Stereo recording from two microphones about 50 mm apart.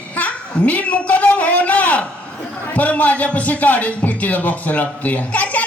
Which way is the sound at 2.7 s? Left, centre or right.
Left.